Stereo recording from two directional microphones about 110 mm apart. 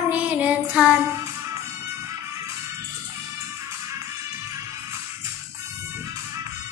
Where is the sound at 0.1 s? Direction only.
15° right (ahead or behind).